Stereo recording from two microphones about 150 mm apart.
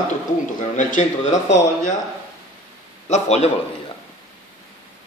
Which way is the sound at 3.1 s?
50° left (ahead or behind).